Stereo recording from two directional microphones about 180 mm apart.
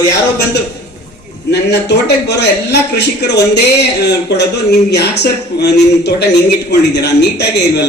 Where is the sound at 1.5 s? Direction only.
70° left (ahead or behind).